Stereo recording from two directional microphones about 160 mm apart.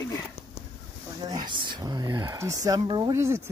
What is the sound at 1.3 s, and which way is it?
Speech, 30° right (ahead or behind).